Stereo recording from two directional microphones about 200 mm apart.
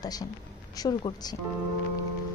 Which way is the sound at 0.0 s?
20° left (ahead or behind).